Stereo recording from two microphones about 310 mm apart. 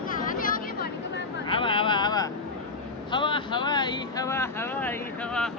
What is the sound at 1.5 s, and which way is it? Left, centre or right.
Vehicle, centre.